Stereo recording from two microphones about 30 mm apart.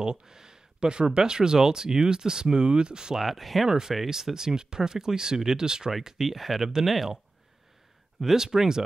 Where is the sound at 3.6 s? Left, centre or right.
Centre.